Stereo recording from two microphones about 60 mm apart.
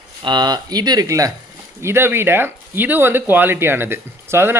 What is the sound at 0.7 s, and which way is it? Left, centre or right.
Speech, right.